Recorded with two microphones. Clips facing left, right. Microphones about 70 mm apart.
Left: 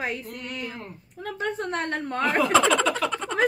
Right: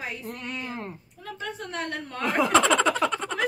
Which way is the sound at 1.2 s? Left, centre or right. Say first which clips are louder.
Left 6 dB; left.